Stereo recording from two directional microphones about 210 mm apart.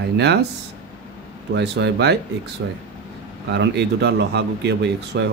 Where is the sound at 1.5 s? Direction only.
55° right (ahead or behind).